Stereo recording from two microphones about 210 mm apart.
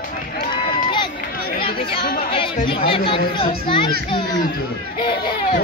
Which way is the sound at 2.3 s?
25° left (ahead or behind).